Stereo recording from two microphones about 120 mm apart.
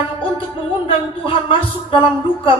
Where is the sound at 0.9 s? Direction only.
45° left (ahead or behind).